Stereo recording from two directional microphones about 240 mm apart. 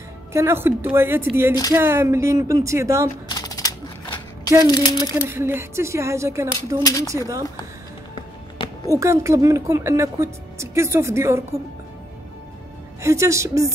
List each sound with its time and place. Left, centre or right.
0.3 s speech: centre
3.3 s typewriter: centre
4.6 s speech: centre
5.1 s speech: centre
6.8 s speech: centre
8.9 s speech: centre
13.0 s speech: centre